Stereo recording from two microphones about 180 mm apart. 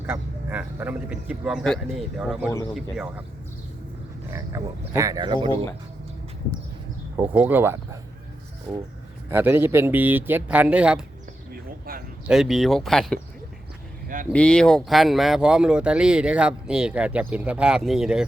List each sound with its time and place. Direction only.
0.0 s speech: 10° right (ahead or behind)
4.3 s speech: 20° right (ahead or behind)
7.2 s speech: 10° right (ahead or behind)
8.7 s speech: 5° left (ahead or behind)
9.3 s speech: 10° right (ahead or behind)
11.9 s speech: 55° right (ahead or behind)
12.3 s speech: centre (ahead or behind)
14.3 s speech: 5° left (ahead or behind)